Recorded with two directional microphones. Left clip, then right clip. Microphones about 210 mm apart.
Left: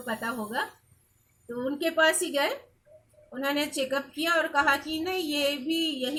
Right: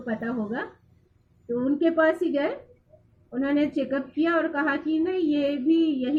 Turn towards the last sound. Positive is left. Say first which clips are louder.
# right 6 dB
turn(degrees=20)  # may be behind; listen again after turning